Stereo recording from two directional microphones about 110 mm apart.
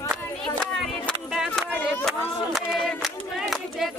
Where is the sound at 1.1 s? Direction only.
10° left (ahead or behind).